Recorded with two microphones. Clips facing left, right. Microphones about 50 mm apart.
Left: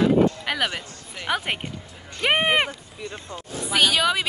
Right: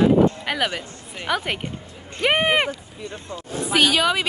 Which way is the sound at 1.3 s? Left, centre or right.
Centre.